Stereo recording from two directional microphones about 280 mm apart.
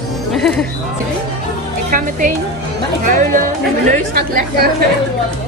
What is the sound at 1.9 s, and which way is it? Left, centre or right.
Music, right.